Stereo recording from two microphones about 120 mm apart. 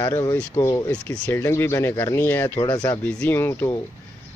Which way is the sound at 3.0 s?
15° left (ahead or behind).